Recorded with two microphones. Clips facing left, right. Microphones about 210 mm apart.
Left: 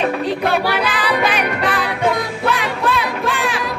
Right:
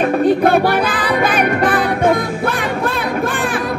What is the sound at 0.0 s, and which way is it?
Music, 50° right (ahead or behind).